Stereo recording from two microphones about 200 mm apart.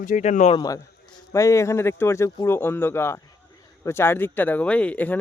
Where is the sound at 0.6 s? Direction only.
15° left (ahead or behind).